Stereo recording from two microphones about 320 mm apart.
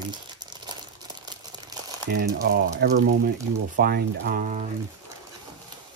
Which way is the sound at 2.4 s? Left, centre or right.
Right.